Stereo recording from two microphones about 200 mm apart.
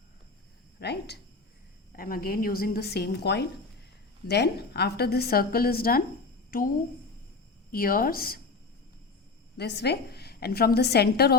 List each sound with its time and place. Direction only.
0.8 s a woman's voice: 55° left (ahead or behind)
7.7 s a woman's voice: 45° left (ahead or behind)
9.6 s a woman's voice: 55° left (ahead or behind)